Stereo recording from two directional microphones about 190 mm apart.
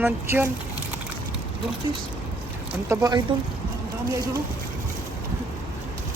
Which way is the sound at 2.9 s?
20° right (ahead or behind).